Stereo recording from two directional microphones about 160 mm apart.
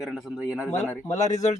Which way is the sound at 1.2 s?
45° left (ahead or behind).